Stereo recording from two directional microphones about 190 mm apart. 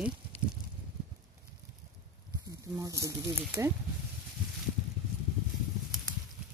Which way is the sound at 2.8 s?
15° right (ahead or behind).